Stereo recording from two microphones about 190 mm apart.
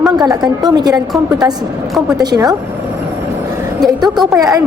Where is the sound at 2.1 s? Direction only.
20° right (ahead or behind).